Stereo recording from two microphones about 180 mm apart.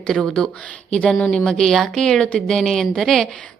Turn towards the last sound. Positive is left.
turn(degrees=0)  # may be behind; listen again after turning